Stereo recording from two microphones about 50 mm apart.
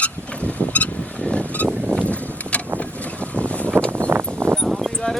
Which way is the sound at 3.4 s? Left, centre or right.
Left.